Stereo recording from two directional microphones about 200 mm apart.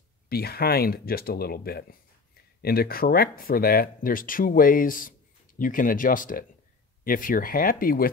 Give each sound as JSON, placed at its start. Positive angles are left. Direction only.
{"t": 0.3, "sound": "speech", "side_deg": 50}